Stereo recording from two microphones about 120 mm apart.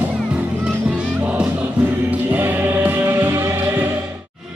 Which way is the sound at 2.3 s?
15° right (ahead or behind).